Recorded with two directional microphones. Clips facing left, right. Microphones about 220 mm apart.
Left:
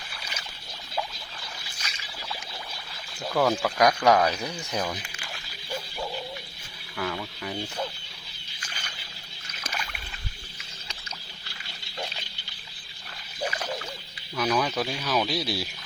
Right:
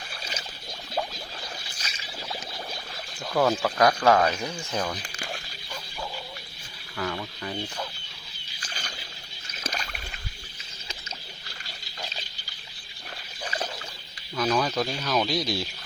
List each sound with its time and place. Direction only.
0.2 s a sound: 30° right (ahead or behind)
1.8 s boat: 30° right (ahead or behind)
3.3 s speech: 5° right (ahead or behind)
3.8 s speech: 15° left (ahead or behind)
6.9 s speech: 5° left (ahead or behind)
9.7 s boat: 40° right (ahead or behind)
14.3 s speech: 5° left (ahead or behind)